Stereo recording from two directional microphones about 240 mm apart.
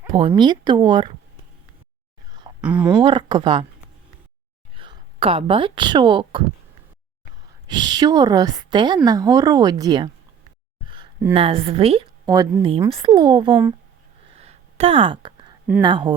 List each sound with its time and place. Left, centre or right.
0.1 s a woman's voice: centre
2.6 s speech: centre
3.0 s a woman's voice: centre
4.8 s speech: right
7.7 s a woman's voice: centre
11.3 s a woman's voice: right
14.3 s a sound: right
15.8 s a woman's voice: centre